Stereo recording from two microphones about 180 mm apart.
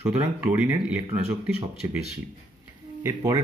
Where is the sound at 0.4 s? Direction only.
10° right (ahead or behind).